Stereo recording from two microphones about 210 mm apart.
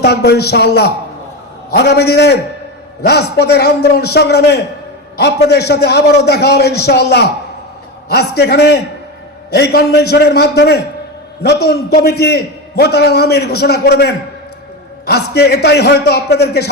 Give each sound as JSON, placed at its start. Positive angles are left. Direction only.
{"t": 0.0, "sound": "a man's voice", "side_deg": 50}